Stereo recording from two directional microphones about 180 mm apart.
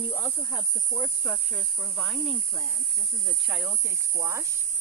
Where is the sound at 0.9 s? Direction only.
5° left (ahead or behind); by 4.4 s 15° right (ahead or behind).